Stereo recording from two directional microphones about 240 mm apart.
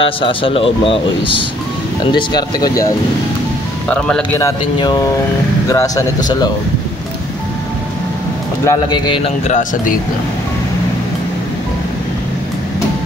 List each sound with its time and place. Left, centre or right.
0.0 s speech: left
3.9 s speech: centre
8.6 s speech: centre